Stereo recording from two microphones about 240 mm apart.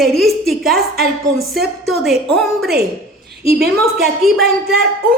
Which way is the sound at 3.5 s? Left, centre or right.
Right.